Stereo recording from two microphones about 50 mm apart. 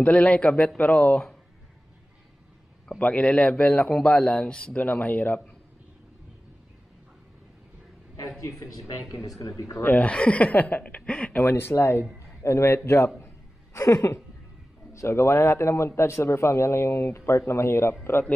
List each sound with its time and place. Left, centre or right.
0.0 s a man's voice: left
3.0 s a man's voice: left
4.8 s a man's voice: left
8.4 s speech: left
9.8 s a man's voice: left
11.4 s speech: left
12.4 s speech: left
13.7 s a woman's voice: left